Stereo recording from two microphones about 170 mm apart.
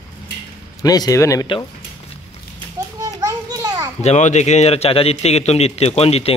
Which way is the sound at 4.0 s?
40° left (ahead or behind).